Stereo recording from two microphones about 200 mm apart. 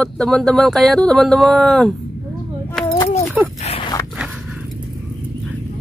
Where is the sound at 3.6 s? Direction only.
30° left (ahead or behind).